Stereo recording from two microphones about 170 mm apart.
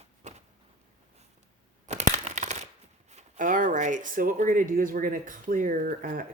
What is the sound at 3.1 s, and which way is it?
Speech, 45° right (ahead or behind).